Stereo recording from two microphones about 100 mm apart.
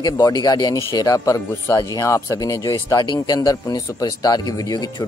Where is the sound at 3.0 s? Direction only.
45° left (ahead or behind).